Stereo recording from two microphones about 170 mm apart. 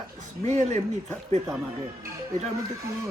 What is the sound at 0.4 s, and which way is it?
Speech, 40° right (ahead or behind).